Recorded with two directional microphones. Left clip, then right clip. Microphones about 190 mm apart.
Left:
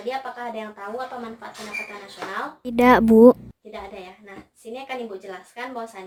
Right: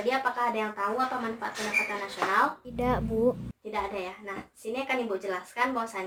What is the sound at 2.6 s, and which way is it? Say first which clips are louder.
Speech: left 13 dB; 55° left (ahead or behind).